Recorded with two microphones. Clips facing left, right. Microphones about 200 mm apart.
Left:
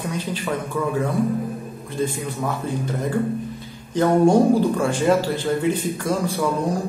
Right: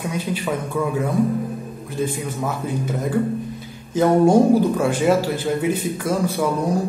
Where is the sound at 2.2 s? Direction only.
10° right (ahead or behind).